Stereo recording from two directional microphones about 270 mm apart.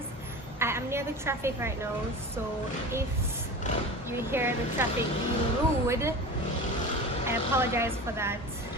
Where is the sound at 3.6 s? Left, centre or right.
Left.